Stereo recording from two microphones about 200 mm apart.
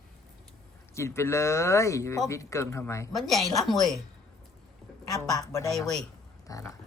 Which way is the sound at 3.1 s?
Centre (ahead or behind).